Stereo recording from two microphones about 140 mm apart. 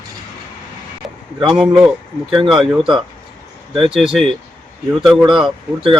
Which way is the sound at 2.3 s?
40° right (ahead or behind).